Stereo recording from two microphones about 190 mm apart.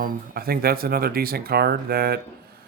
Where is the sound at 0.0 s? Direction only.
50° right (ahead or behind).